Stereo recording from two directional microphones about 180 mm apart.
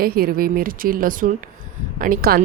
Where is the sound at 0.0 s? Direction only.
55° right (ahead or behind).